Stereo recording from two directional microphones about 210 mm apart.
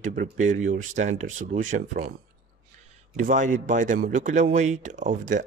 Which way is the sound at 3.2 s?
40° right (ahead or behind).